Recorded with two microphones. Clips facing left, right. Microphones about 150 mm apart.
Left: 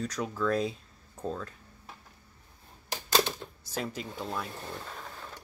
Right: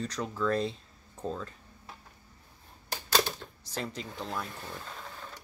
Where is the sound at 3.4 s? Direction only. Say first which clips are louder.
Left 3 dB; 15° left (ahead or behind).